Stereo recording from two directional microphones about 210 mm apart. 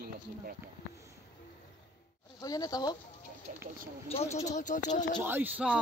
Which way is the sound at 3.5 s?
35° right (ahead or behind).